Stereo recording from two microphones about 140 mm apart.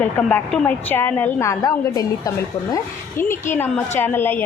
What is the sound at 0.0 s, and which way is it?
A woman's voice, 10° left (ahead or behind).